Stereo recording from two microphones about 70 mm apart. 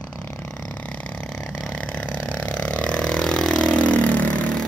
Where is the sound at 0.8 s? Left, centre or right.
Centre.